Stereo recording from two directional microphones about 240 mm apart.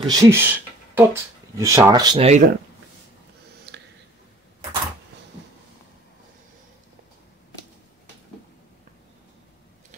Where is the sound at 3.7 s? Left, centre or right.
Right.